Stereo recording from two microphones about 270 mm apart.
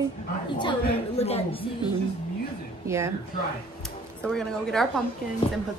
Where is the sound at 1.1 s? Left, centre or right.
Left.